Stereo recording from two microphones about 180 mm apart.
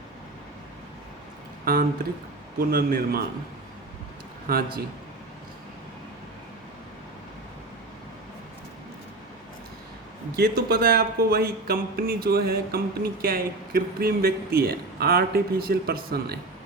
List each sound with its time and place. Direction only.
1.6 s speech: 55° right (ahead or behind)
4.4 s speech: 55° right (ahead or behind)
10.3 s speech: 55° right (ahead or behind)